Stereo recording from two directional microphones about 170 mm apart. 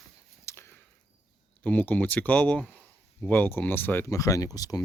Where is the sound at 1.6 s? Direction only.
10° left (ahead or behind).